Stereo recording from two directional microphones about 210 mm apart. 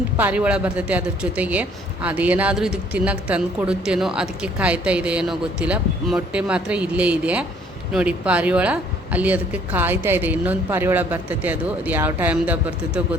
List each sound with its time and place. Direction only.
0.2 s speech: 5° right (ahead or behind)